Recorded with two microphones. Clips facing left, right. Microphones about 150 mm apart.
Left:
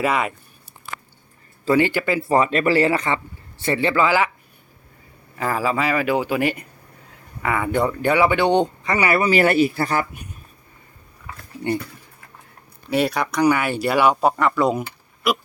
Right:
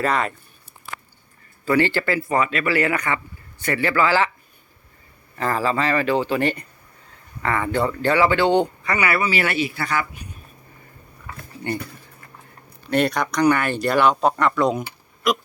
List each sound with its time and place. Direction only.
0.0 s speech: 10° left (ahead or behind)
1.7 s speech: 15° left (ahead or behind)
2.2 s speech: 35° left (ahead or behind); by 4.3 s 15° left (ahead or behind)
5.4 s speech: 10° left (ahead or behind)
9.1 s speech: 45° left (ahead or behind)
12.9 s speech: 5° left (ahead or behind)